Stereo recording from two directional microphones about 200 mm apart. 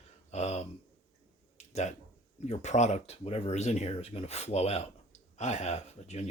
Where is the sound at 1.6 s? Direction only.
35° left (ahead or behind).